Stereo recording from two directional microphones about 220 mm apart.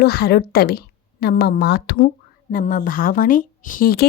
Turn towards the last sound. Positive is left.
turn(degrees=40)  # may be behind; listen again after turning